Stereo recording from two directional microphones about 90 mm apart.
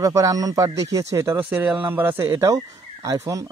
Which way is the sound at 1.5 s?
15° right (ahead or behind).